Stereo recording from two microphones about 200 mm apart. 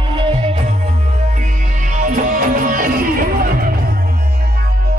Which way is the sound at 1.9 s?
40° right (ahead or behind).